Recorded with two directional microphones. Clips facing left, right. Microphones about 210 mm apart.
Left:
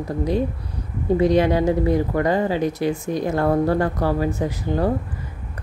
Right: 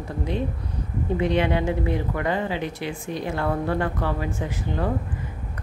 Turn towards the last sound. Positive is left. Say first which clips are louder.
# left 5 dB
turn(degrees=35)  # may be behind; listen again after turning